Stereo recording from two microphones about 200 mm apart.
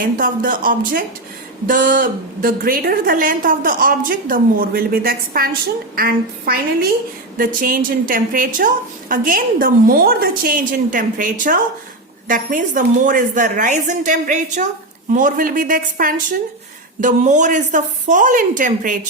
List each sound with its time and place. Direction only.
0.0 s a woman's voice: 45° right (ahead or behind)